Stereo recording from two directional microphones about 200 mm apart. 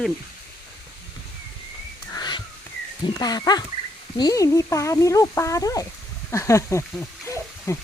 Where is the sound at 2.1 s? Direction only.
20° left (ahead or behind).